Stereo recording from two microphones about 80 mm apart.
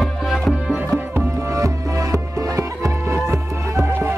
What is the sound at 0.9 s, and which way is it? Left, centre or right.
Music, right.